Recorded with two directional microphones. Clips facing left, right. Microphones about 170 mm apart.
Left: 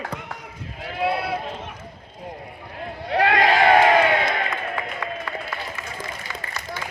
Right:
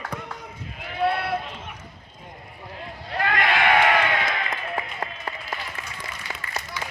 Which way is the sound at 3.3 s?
35° left (ahead or behind).